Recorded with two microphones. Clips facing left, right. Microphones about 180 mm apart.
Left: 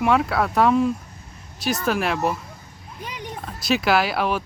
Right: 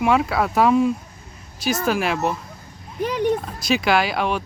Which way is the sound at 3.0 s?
65° right (ahead or behind).